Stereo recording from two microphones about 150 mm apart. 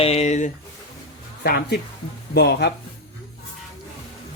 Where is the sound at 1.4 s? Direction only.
85° left.